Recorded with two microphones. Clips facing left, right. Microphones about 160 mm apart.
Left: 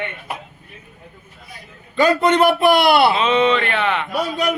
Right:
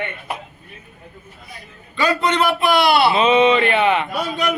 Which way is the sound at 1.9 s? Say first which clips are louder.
Left 4 dB; 50° left (ahead or behind).